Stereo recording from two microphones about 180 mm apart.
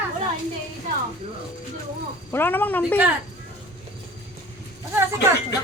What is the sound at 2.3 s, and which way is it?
Speech, 10° left (ahead or behind).